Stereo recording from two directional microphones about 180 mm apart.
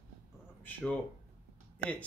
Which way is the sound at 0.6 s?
10° left (ahead or behind).